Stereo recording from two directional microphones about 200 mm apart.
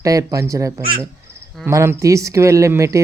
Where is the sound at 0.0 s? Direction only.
15° right (ahead or behind).